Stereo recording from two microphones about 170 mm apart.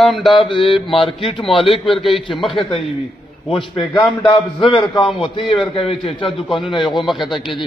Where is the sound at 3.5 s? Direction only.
30° left (ahead or behind).